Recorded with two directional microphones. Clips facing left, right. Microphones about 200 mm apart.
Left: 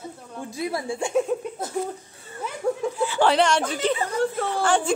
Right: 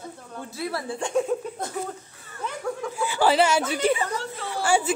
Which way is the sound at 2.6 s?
25° left (ahead or behind).